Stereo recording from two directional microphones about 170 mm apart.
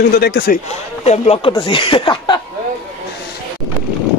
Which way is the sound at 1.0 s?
40° left (ahead or behind).